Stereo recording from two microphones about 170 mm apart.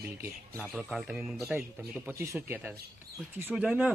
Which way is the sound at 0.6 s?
Centre (ahead or behind).